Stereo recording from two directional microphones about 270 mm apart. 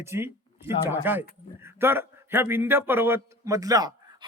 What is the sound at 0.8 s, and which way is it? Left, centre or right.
Speech, centre.